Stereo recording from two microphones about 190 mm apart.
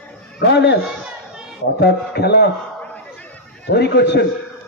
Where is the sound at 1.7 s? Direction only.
60° left (ahead or behind).